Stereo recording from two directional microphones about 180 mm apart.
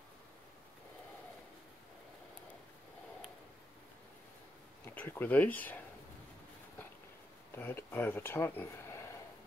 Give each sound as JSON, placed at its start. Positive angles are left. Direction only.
{"t": 4.8, "sound": "speech", "side_deg": 10}
{"t": 7.5, "sound": "speech", "side_deg": 10}